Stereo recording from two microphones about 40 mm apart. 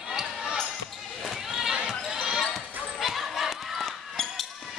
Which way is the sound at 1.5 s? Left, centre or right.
Centre.